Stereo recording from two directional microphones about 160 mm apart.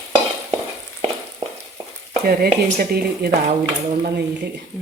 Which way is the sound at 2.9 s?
75° right (ahead or behind).